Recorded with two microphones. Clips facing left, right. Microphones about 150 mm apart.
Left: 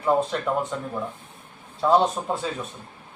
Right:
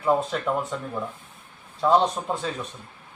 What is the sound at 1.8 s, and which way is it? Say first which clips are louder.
Speech: left 1 dB; 5° left (ahead or behind).